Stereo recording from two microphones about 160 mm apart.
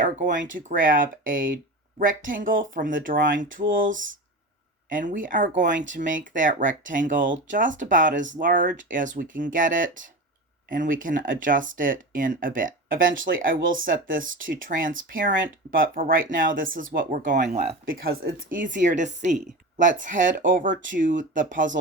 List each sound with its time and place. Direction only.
0.3 s speech: 60° right (ahead or behind)
4.9 s speech: 55° right (ahead or behind)
17.8 s speech: 65° right (ahead or behind)
18.5 s speech: 55° right (ahead or behind)